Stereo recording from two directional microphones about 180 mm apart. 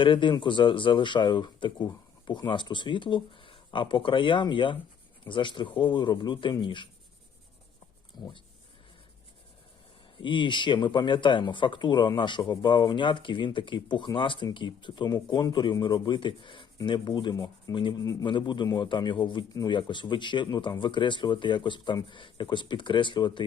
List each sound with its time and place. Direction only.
0.0 s speech: 25° left (ahead or behind)
8.1 s speech: 25° left (ahead or behind)
10.2 s speech: 25° left (ahead or behind)